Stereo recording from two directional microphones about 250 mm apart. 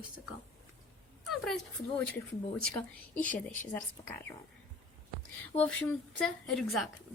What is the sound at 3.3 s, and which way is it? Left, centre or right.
Speech, left.